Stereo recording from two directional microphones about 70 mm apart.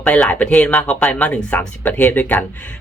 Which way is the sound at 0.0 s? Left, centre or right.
Centre.